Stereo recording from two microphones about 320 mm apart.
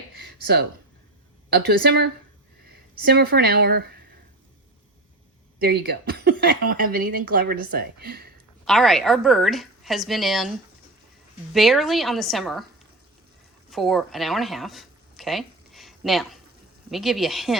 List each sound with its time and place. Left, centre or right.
0.2 s a sound: right
1.5 s speech: right
5.5 s speech: right
8.6 s a woman's voice: centre
11.5 s a woman's voice: centre
13.7 s a woman's voice: centre